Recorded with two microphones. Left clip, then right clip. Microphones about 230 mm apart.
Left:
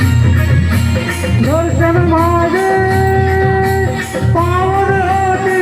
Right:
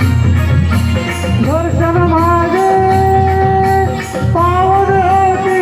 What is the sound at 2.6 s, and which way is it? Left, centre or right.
Music, left.